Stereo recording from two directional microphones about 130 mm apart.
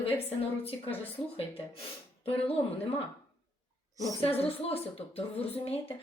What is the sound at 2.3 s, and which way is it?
Speech, 50° left (ahead or behind).